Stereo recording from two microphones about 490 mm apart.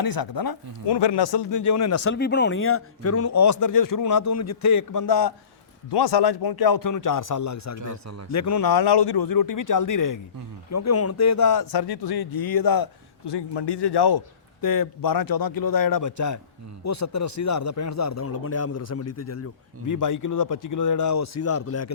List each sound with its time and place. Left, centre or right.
0.0 s speech: left
2.1 s speech: centre; by 5.3 s left
5.9 s speech: left
7.8 s speech: right
8.3 s speech: left